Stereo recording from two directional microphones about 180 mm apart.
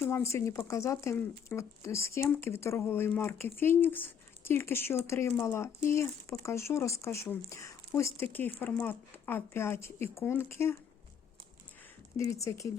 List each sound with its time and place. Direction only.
0.0 s speech: 15° left (ahead or behind)
12.4 s speech: 15° left (ahead or behind)